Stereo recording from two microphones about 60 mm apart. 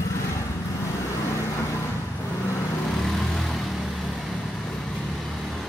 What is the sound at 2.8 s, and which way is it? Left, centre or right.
Vehicle, centre.